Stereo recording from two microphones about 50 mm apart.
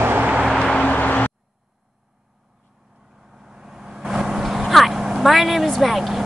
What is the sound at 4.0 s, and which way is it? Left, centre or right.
Vehicle, centre.